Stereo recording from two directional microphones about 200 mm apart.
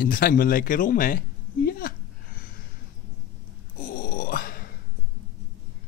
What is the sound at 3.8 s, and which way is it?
Grunt, 45° left (ahead or behind).